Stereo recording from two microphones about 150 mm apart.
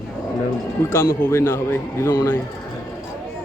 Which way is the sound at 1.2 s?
15° left (ahead or behind).